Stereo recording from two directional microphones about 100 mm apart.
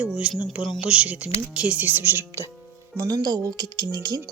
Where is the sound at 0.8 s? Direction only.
10° right (ahead or behind).